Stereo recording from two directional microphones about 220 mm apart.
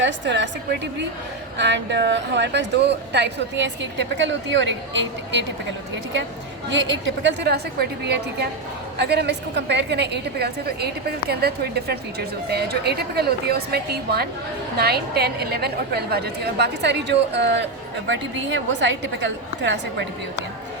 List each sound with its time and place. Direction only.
0.0 s a woman's voice: 55° right (ahead or behind)
1.5 s a woman's voice: 50° right (ahead or behind)
6.7 s a woman's voice: 55° right (ahead or behind)